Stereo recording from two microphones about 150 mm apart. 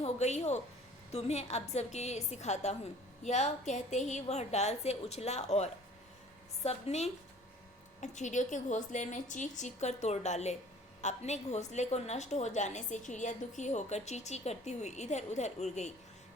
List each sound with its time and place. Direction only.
0.0 s a woman's voice: 50° left (ahead or behind)